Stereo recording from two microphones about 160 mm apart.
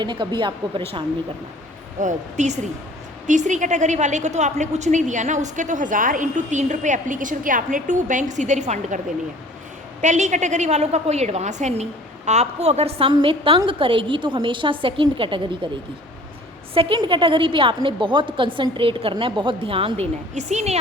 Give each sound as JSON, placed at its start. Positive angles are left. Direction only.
{"t": 0.0, "sound": "a woman's voice", "side_deg": -30}
{"t": 2.0, "sound": "a woman's voice", "side_deg": -50}
{"t": 10.0, "sound": "a woman's voice", "side_deg": -50}
{"t": 16.7, "sound": "a woman's voice", "side_deg": -30}